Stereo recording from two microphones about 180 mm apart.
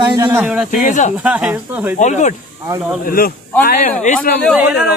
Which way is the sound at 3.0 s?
55° left (ahead or behind).